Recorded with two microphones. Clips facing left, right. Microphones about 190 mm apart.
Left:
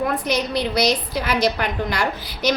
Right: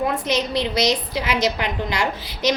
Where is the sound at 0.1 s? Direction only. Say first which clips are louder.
Even; 25° right (ahead or behind).